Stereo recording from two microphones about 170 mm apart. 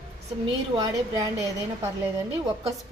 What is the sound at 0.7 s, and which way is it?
Speech, 20° right (ahead or behind).